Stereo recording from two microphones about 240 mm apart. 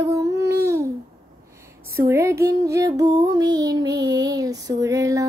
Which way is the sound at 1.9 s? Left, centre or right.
Centre.